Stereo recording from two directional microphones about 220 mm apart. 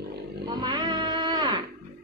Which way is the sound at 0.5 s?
20° right (ahead or behind).